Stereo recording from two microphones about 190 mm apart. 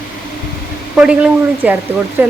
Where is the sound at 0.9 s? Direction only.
5° right (ahead or behind).